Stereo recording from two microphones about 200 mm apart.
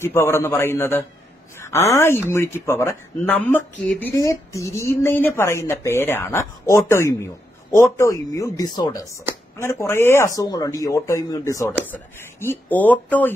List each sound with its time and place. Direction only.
0.0 s speech: 10° left (ahead or behind)
2.2 s speech: 10° left (ahead or behind)